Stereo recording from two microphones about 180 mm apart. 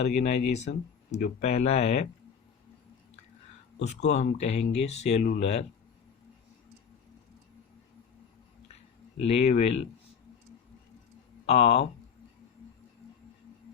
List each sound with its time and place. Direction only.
0.0 s speech: 40° left (ahead or behind)
3.8 s speech: 40° left (ahead or behind)
9.3 s speech: 35° left (ahead or behind)
11.4 s speech: 35° left (ahead or behind)